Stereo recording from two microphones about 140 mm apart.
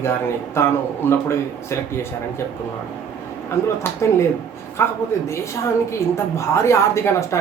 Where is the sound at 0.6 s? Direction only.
15° left (ahead or behind).